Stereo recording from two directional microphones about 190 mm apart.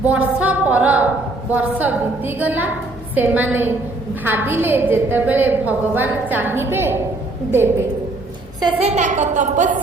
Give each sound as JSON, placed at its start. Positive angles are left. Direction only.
{"t": 0.0, "sound": "a woman's voice", "side_deg": -5}
{"t": 8.6, "sound": "a woman's voice", "side_deg": -35}